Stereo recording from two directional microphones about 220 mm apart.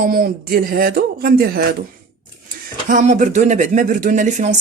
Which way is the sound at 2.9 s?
35° right (ahead or behind).